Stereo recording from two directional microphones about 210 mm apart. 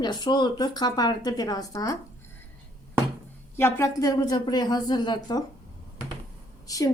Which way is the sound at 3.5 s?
10° left (ahead or behind).